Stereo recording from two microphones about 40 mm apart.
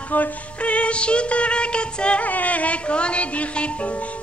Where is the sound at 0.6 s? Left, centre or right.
Left.